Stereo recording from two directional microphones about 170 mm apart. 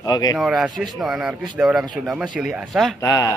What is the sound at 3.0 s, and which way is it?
Speech, 20° left (ahead or behind).